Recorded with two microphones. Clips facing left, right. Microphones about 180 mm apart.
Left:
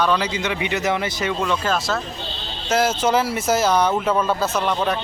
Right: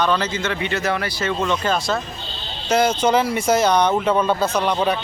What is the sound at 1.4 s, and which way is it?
A man's voice, 5° left (ahead or behind).